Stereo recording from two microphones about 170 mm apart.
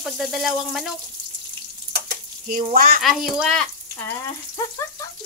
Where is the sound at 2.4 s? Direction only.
50° right (ahead or behind).